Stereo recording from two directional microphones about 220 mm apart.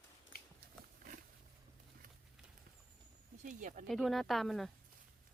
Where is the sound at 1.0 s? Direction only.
40° right (ahead or behind).